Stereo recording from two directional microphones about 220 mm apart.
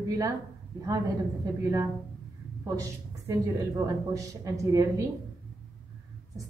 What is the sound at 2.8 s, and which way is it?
A woman's voice, 15° right (ahead or behind).